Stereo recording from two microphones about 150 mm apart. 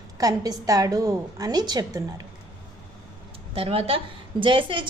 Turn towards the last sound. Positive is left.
turn(degrees=-35)  # may be behind; listen again after turning